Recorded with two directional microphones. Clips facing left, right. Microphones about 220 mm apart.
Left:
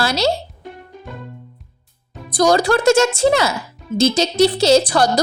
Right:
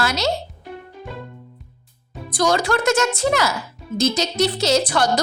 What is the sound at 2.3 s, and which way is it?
A woman's voice, 35° left (ahead or behind).